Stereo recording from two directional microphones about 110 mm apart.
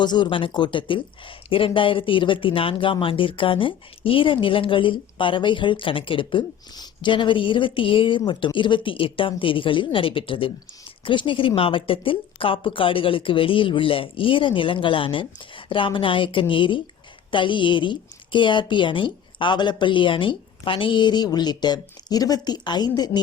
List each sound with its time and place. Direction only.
0.0 s a woman's voice: 45° left (ahead or behind)